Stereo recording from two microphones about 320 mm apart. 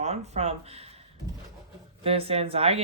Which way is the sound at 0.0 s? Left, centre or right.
Centre.